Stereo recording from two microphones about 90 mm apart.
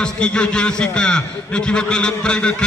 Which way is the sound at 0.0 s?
10° left (ahead or behind).